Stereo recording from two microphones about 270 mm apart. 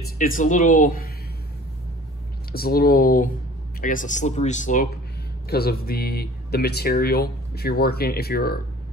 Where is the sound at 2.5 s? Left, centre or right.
Left.